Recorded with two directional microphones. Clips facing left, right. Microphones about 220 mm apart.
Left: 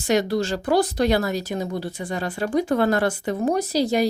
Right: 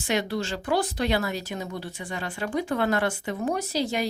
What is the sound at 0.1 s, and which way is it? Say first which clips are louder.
Speech: left 6 dB; 40° left (ahead or behind).